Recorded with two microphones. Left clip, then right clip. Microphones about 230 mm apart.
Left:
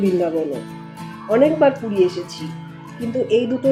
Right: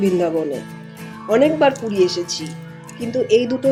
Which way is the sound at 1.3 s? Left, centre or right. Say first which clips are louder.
Even; right.